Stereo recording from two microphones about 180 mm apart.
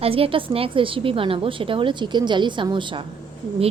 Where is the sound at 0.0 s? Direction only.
30° right (ahead or behind).